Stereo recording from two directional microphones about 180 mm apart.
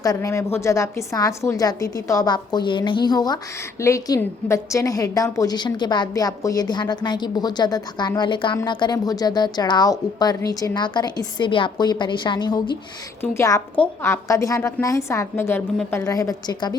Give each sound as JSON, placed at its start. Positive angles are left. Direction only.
{"t": 0.0, "sound": "a woman's voice", "side_deg": 20}